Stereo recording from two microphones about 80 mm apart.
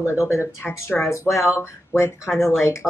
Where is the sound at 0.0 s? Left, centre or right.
Left.